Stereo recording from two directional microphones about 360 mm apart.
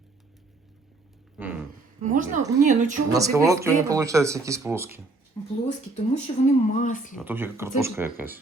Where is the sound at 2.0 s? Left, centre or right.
Right.